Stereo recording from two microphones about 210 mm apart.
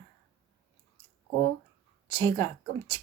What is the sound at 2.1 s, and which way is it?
Speech, 20° left (ahead or behind).